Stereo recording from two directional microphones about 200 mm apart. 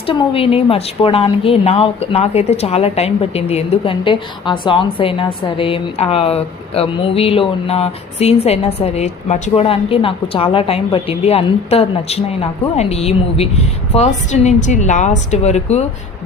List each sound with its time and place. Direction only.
0.1 s a woman's voice: 25° left (ahead or behind)